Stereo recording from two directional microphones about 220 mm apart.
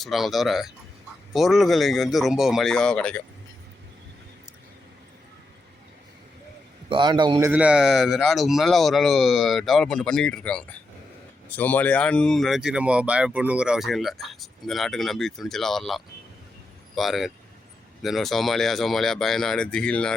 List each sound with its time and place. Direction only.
0.0 s speech: centre (ahead or behind)
6.9 s a man's voice: 20° right (ahead or behind)
7.5 s speech: 5° right (ahead or behind)